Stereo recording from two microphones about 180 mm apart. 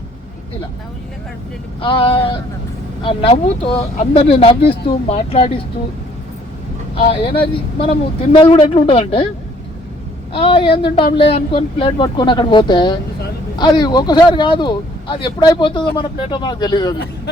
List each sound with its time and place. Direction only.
1.8 s speech: 30° left (ahead or behind)
6.9 s speech: 30° left (ahead or behind)
10.3 s speech: 30° left (ahead or behind)